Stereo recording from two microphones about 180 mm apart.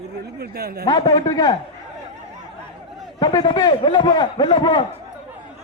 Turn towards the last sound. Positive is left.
turn(degrees=25)  # may be behind; listen again after turning